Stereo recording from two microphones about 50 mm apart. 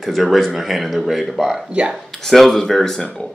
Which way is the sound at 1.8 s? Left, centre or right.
Right.